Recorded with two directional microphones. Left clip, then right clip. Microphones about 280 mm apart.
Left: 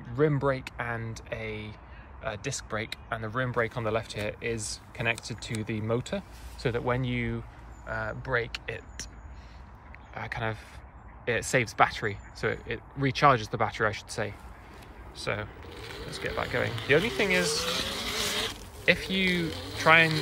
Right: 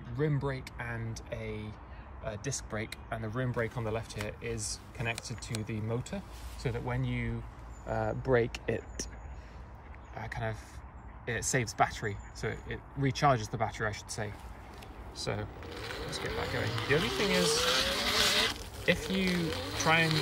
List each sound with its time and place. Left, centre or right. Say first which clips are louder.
0.1 s speech: left 8 dB; centre
7.9 s speech: right 1 dB; centre
10.1 s speech: left 5 dB; centre
15.6 s speech: right 1 dB; centre